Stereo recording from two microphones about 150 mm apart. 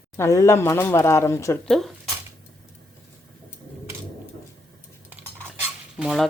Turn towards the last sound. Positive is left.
turn(degrees=0)  # may be behind; listen again after turning